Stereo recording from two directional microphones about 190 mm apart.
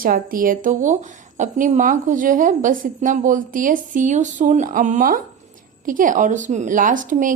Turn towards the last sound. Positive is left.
turn(degrees=-45)  # may be behind; listen again after turning